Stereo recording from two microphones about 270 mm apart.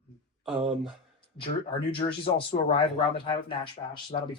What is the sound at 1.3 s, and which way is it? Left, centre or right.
Speech, centre.